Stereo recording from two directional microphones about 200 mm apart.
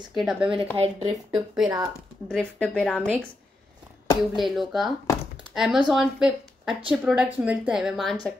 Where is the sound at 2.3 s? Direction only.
5° left (ahead or behind).